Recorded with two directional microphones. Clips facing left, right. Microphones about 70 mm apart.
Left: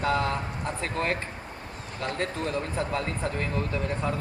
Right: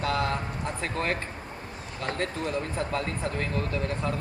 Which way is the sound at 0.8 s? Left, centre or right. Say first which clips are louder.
Left 1 dB; left.